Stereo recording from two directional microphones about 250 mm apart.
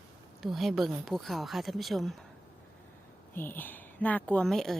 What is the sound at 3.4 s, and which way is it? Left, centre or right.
Speech, centre.